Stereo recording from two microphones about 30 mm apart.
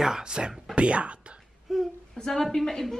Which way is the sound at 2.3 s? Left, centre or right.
Centre.